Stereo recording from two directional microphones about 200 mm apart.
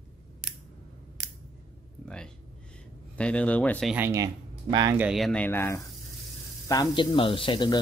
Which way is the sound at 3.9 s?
10° right (ahead or behind).